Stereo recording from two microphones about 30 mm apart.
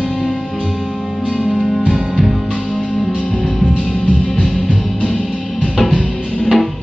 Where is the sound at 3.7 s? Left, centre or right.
Left.